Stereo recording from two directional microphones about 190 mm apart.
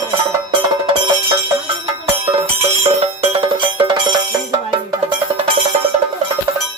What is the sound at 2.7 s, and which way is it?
Music, 35° right (ahead or behind).